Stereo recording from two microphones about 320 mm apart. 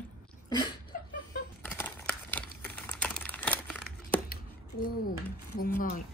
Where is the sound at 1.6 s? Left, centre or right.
Centre.